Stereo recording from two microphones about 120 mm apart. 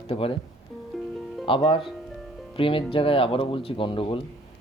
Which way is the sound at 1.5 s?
45° left (ahead or behind).